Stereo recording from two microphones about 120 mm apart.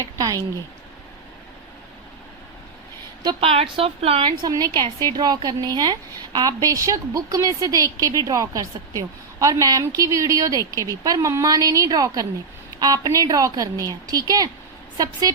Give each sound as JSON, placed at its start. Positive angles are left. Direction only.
{"t": 0.0, "sound": "a sound", "side_deg": -30}
{"t": 3.4, "sound": "a woman's voice", "side_deg": -55}
{"t": 4.3, "sound": "a woman's voice", "side_deg": -35}